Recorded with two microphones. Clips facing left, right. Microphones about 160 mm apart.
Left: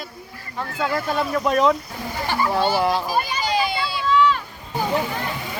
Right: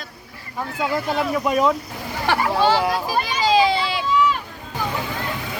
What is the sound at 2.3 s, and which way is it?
Speech, 75° right (ahead or behind).